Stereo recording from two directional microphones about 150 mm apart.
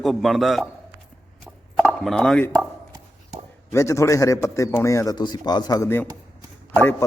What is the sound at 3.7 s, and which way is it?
A man's voice, 20° left (ahead or behind).